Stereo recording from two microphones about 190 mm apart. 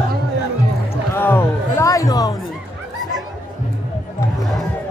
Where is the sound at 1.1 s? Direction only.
10° left (ahead or behind).